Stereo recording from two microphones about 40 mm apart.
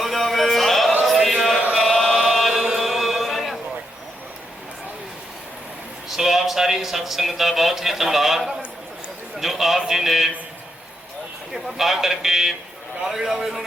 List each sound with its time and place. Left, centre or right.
0.0 s a sound: centre
1.0 s chant: centre
1.8 s chant: centre
2.0 s chant: centre
2.5 s chant: centre
6.1 s a man's voice: centre
11.5 s a man's voice: centre